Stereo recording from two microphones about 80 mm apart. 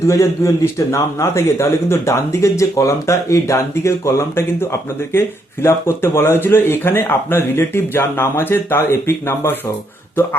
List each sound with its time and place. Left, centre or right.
0.0 s speech: left